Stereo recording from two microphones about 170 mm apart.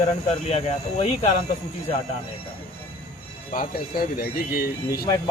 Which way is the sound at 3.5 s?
60° left (ahead or behind).